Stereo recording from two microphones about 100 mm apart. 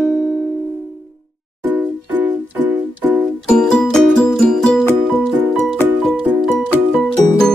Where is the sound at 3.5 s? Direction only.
5° left (ahead or behind).